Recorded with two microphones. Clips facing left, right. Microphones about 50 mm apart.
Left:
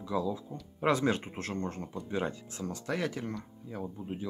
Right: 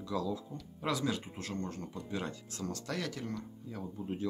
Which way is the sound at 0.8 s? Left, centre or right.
Left.